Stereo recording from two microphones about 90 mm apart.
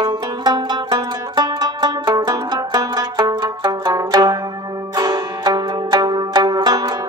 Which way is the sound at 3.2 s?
55° right (ahead or behind).